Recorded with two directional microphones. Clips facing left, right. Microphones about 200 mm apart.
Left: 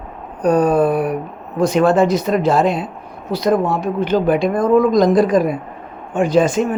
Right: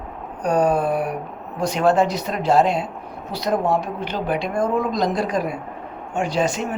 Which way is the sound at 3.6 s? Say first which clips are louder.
Left 1 dB; 90° left.